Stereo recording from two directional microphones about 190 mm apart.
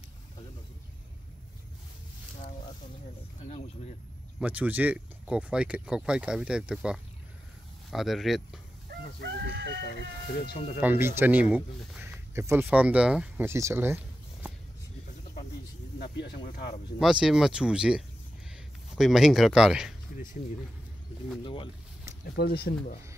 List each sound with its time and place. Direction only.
3.4 s speech: 40° left (ahead or behind)
4.4 s speech: 10° right (ahead or behind)
8.9 s chicken: 60° right (ahead or behind)
10.8 s speech: 10° right (ahead or behind)
16.0 s speech: 55° left (ahead or behind)
17.0 s speech: 5° right (ahead or behind)
22.3 s speech: 55° left (ahead or behind)